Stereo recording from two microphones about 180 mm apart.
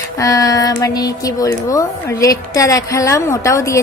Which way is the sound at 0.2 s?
20° left (ahead or behind).